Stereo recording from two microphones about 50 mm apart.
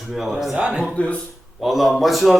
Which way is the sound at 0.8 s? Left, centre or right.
Left.